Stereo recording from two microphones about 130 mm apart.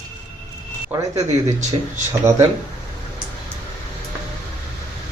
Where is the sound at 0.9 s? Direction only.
20° right (ahead or behind).